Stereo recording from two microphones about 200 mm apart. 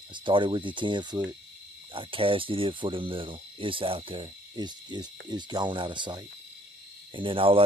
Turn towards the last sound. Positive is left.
turn(degrees=-25)  # may be behind; listen again after turning